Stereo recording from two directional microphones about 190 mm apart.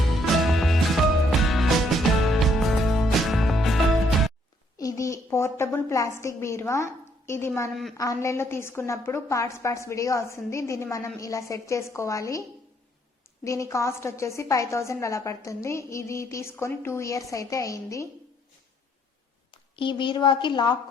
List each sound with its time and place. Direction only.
0.1 s music: centre (ahead or behind)
4.8 s a woman's voice: 20° left (ahead or behind)
13.4 s a woman's voice: 15° left (ahead or behind)
19.7 s a woman's voice: 25° left (ahead or behind)